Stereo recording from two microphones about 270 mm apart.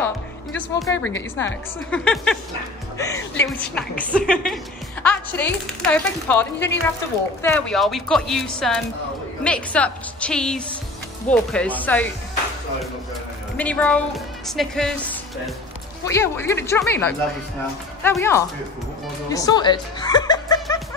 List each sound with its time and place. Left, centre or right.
0.6 s speech: centre
13.6 s speech: centre
19.3 s music: centre